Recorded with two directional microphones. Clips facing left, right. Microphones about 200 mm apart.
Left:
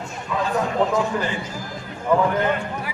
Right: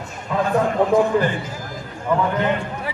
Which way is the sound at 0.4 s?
55° right (ahead or behind).